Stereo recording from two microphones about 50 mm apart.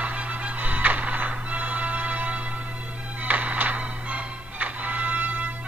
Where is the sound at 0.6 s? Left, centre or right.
Right.